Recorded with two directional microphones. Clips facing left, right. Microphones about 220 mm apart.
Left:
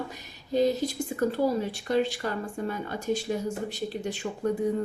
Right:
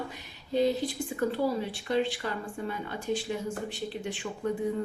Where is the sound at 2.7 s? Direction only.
40° left (ahead or behind).